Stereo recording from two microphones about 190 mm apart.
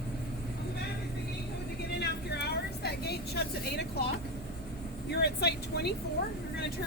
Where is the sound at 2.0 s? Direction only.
60° left (ahead or behind).